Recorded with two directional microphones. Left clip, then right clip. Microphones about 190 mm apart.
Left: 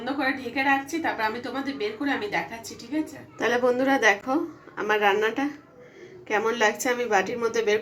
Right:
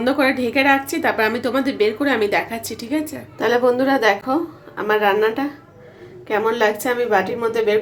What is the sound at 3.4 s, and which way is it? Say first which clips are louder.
A woman's voice: right 6 dB; 5° right (ahead or behind).